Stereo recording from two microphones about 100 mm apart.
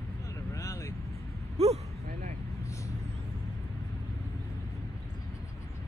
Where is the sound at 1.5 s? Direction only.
90° right.